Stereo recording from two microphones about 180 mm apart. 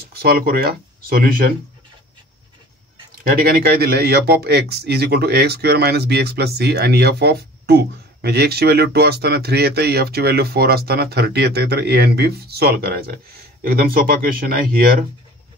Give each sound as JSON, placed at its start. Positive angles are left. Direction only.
{"t": 0.1, "sound": "speech", "side_deg": -60}
{"t": 3.4, "sound": "speech", "side_deg": -55}